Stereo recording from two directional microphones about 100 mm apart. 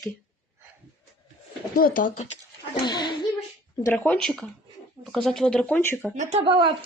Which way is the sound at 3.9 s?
10° left (ahead or behind).